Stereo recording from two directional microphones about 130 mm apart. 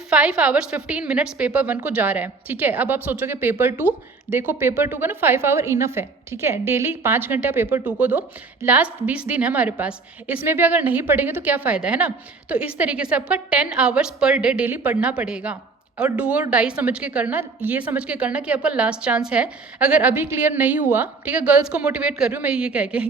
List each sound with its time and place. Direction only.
0.1 s a woman's voice: 10° right (ahead or behind)